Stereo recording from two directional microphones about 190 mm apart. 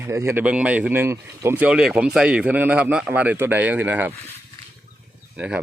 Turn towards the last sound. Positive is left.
turn(degrees=-5)  # may be behind; listen again after turning